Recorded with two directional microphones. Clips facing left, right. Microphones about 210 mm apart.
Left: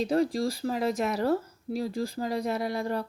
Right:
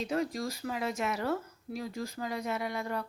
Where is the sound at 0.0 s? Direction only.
35° left (ahead or behind).